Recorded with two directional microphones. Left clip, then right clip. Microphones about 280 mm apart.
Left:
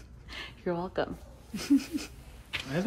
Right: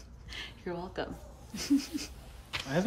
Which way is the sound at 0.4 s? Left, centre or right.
Centre.